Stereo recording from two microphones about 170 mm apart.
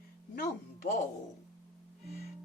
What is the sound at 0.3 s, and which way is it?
Speech, 55° left (ahead or behind).